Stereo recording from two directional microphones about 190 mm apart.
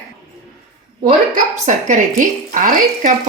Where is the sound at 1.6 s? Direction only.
40° right (ahead or behind).